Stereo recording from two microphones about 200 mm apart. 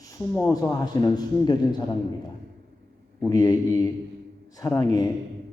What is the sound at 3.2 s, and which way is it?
A man's voice, 20° left (ahead or behind).